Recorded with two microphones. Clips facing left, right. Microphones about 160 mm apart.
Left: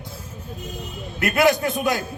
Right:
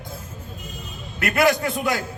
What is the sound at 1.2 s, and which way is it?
Speech, 20° left (ahead or behind).